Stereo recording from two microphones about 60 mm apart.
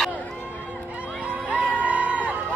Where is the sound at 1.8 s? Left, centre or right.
Right.